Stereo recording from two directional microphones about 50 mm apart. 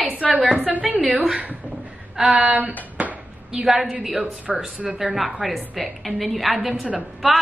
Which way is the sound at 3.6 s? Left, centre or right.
Centre.